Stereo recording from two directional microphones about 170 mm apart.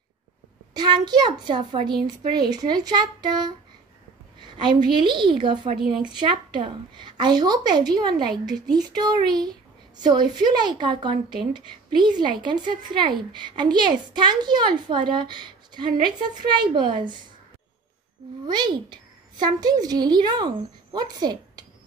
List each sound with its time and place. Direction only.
0.7 s a woman's voice: 25° right (ahead or behind)
18.5 s a woman's voice: 25° right (ahead or behind)